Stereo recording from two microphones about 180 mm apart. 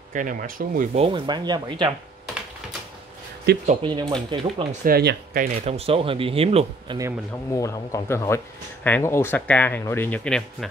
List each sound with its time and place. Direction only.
0.1 s speech: 45° right (ahead or behind)
0.9 s speech: 30° right (ahead or behind)
3.8 s speech: 25° right (ahead or behind)
4.8 s speech: 55° right (ahead or behind)
5.7 s speech: 35° right (ahead or behind)
7.5 s speech: 15° left (ahead or behind)